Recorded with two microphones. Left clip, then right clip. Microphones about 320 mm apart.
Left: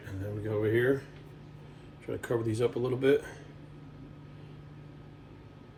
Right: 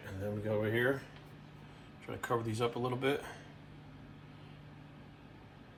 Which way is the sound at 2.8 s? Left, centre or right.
Centre.